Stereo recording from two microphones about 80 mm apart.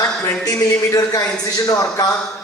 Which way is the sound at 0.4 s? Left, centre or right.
Left.